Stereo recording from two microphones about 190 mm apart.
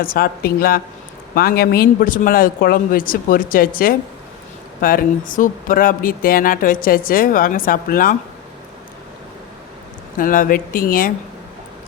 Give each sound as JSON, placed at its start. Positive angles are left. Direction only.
{"t": 0.0, "sound": "speech", "side_deg": 50}
{"t": 10.2, "sound": "speech", "side_deg": 45}